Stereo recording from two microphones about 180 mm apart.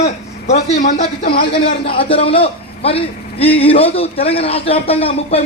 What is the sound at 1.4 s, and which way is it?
A man's voice, 30° left (ahead or behind).